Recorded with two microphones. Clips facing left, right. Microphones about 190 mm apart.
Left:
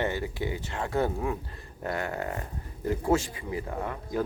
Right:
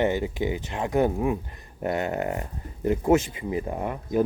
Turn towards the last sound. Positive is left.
turn(degrees=-20)  # may be behind; listen again after turning